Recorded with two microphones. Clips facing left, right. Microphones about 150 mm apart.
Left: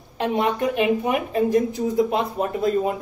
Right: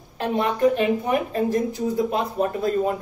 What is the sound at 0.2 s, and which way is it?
A woman's voice, 15° left (ahead or behind).